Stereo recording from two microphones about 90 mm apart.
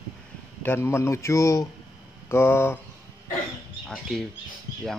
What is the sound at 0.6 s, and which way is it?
Speech, 25° left (ahead or behind).